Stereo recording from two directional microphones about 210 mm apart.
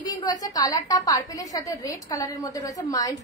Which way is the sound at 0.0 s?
20° left (ahead or behind).